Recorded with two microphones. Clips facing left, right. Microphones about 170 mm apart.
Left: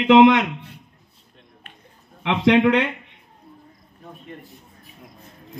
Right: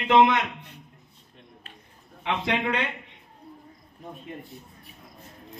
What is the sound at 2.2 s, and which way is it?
Speech, 70° left (ahead or behind).